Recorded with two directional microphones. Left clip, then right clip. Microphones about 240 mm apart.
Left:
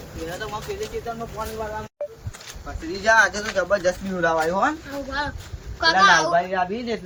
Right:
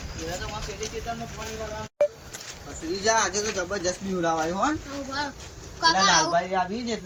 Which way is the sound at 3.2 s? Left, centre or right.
Centre.